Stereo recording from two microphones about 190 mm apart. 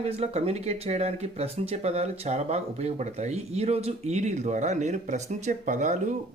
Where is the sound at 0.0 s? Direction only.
35° right (ahead or behind).